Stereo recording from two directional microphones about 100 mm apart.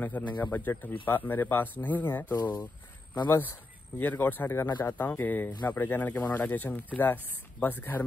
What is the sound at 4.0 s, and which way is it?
Speech, 20° left (ahead or behind).